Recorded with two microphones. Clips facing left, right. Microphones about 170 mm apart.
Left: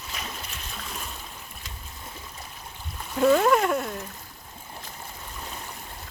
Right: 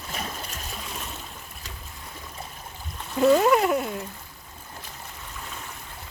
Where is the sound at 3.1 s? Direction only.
Centre (ahead or behind).